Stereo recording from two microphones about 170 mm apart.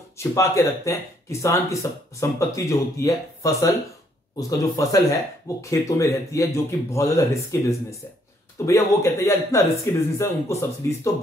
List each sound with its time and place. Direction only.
0.2 s speech: 15° left (ahead or behind)